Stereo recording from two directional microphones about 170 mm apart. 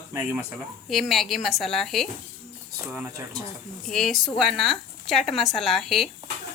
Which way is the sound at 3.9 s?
Centre (ahead or behind).